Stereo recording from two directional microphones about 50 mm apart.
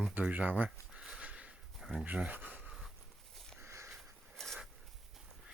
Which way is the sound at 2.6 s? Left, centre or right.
Centre.